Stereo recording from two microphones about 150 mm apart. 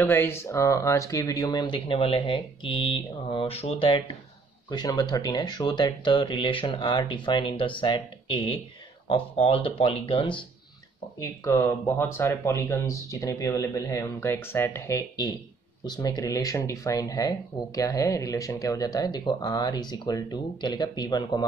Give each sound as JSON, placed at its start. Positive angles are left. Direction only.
{"t": 0.0, "sound": "speech", "side_deg": 15}
{"t": 4.6, "sound": "speech", "side_deg": 30}
{"t": 11.4, "sound": "speech", "side_deg": 20}